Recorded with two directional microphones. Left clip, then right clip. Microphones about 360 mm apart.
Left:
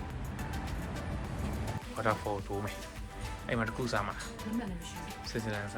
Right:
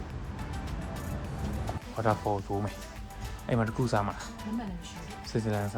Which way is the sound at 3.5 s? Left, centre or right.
Centre.